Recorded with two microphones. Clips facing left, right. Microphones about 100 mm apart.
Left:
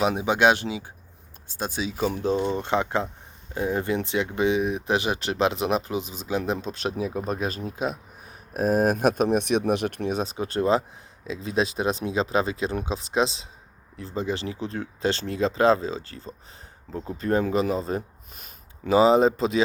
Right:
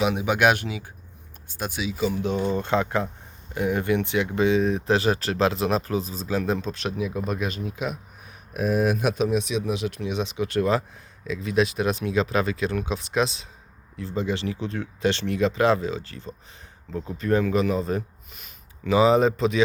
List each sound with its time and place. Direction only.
0.0 s speech: 30° left (ahead or behind)
2.0 s speech: 45° left (ahead or behind)
2.3 s speech: 30° left (ahead or behind); by 10.2 s 55° left (ahead or behind)
10.2 s speech: 35° left (ahead or behind)